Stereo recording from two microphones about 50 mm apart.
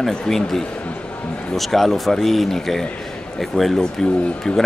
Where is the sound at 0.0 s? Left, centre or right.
Centre.